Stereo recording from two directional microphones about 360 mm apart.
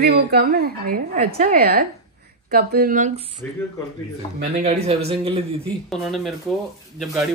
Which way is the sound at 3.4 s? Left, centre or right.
Centre.